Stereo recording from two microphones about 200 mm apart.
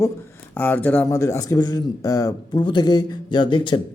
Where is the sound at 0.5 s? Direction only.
10° left (ahead or behind).